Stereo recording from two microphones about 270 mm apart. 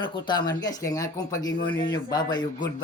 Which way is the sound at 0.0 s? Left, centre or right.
Centre.